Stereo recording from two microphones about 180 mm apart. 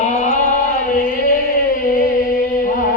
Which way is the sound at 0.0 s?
40° left (ahead or behind).